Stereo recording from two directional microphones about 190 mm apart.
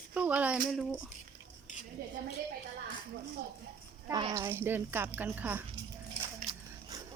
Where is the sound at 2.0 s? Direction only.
50° right (ahead or behind).